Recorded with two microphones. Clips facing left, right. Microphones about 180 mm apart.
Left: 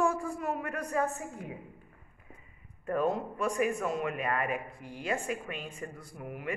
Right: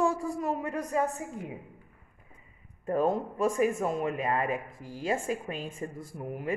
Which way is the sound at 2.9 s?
25° right (ahead or behind).